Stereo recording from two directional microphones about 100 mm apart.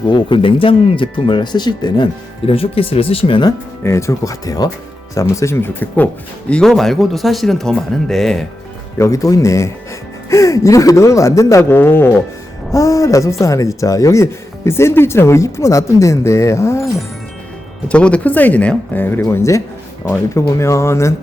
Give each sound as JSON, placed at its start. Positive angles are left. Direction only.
{"t": 0.1, "sound": "speech", "side_deg": 55}
{"t": 2.5, "sound": "speech", "side_deg": 70}
{"t": 3.8, "sound": "speech", "side_deg": 30}
{"t": 6.5, "sound": "speech", "side_deg": 5}
{"t": 9.0, "sound": "speech", "side_deg": 30}
{"t": 12.7, "sound": "speech", "side_deg": 30}
{"t": 17.8, "sound": "speech", "side_deg": 10}